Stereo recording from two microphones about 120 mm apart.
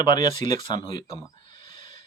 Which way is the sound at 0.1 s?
35° left (ahead or behind).